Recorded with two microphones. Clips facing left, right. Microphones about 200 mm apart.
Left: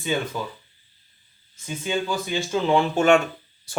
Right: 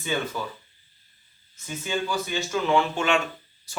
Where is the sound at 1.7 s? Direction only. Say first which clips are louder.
Left 3 dB; 15° left (ahead or behind).